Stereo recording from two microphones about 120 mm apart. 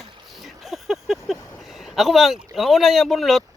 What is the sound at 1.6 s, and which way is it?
Speech, centre (ahead or behind).